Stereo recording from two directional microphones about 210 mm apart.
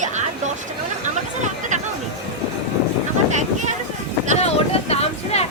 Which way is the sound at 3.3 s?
35° right (ahead or behind).